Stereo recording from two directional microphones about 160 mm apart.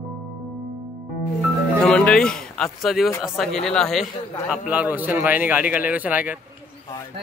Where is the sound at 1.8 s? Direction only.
5° left (ahead or behind).